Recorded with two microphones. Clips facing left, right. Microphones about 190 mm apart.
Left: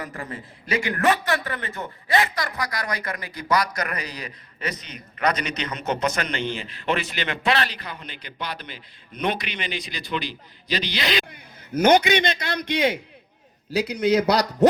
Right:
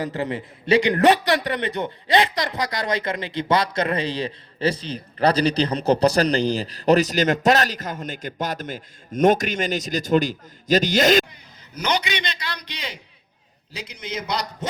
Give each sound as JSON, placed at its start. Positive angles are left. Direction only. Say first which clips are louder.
{"t": 0.0, "sound": "a man's voice", "louder": "right 8 dB", "side_deg": -25}
{"t": 11.3, "sound": "a man's voice", "louder": "left 12 dB", "side_deg": 50}
{"t": 13.7, "sound": "a man's voice", "louder": "left 12 dB", "side_deg": 65}